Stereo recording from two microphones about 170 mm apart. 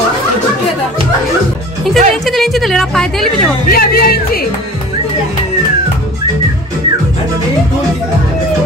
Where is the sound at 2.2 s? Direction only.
Centre (ahead or behind).